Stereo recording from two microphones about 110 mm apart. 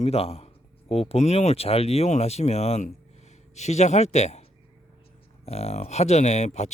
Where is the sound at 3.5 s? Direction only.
90° left.